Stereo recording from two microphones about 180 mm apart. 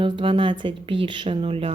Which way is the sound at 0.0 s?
30° right (ahead or behind).